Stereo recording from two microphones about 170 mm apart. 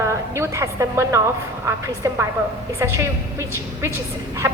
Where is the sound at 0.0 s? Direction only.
15° right (ahead or behind).